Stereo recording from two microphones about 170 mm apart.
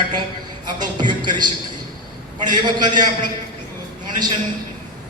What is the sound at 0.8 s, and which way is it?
A man's voice, 25° right (ahead or behind).